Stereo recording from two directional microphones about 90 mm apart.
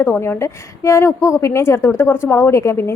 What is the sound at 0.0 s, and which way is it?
A woman's voice, 25° left (ahead or behind).